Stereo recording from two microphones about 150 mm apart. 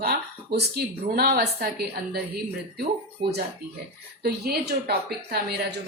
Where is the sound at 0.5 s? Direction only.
90° right.